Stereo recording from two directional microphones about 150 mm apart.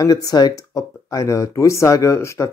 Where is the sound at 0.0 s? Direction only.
25° left (ahead or behind).